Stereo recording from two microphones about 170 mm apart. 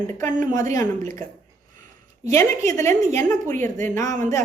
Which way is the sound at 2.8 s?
15° left (ahead or behind).